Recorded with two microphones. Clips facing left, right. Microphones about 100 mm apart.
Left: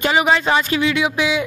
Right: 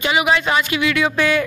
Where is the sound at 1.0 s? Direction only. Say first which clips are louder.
Right 1 dB; 15° left (ahead or behind).